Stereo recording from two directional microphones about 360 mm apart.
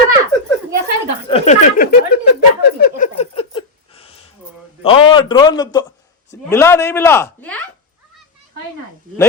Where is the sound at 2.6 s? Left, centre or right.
Left.